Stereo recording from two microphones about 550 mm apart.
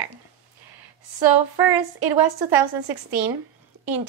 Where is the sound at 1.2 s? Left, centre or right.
Right.